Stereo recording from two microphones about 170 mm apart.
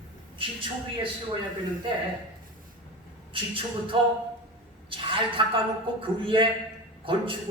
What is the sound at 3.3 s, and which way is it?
A man's voice, 30° right (ahead or behind).